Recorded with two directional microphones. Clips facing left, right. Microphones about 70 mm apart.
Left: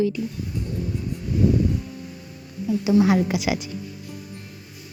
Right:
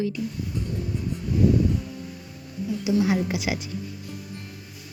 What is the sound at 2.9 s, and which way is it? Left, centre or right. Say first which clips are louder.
Speech: left 4 dB; left.